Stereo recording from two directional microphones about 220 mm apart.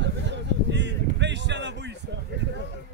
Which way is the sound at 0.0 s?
55° right (ahead or behind).